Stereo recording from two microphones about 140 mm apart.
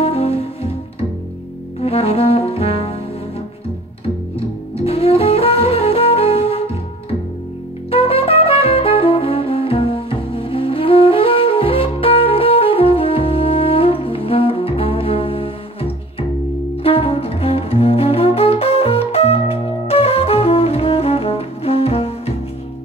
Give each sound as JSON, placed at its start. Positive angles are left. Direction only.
{"t": 0.0, "sound": "music", "side_deg": 45}
{"t": 1.8, "sound": "brass instrument", "side_deg": 45}
{"t": 4.8, "sound": "music", "side_deg": 45}
{"t": 7.9, "sound": "saxophone", "side_deg": 45}
{"t": 16.8, "sound": "music", "side_deg": 45}